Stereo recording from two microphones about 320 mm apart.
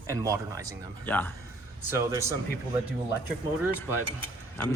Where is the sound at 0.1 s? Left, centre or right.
Centre.